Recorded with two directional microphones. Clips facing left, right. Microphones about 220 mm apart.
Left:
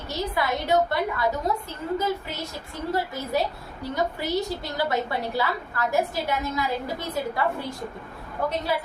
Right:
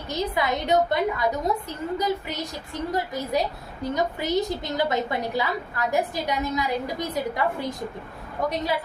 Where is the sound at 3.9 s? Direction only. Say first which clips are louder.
Right 1 dB; 20° right (ahead or behind).